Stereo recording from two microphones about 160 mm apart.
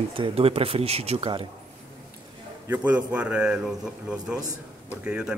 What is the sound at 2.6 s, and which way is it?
A man's voice, 10° right (ahead or behind).